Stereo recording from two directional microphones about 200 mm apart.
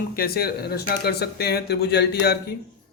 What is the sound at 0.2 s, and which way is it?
A man's voice, 50° left (ahead or behind).